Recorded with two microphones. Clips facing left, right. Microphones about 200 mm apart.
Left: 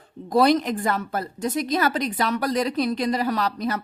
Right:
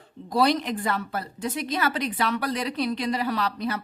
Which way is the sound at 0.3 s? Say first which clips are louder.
Left 4 dB; 50° left (ahead or behind).